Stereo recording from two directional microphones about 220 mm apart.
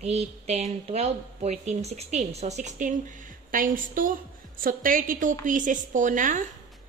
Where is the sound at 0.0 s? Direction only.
30° right (ahead or behind).